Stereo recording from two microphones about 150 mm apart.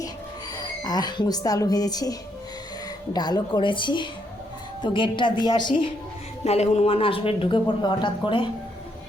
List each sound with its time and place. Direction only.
0.5 s speech: 25° left (ahead or behind)
6.4 s speech: 45° left (ahead or behind)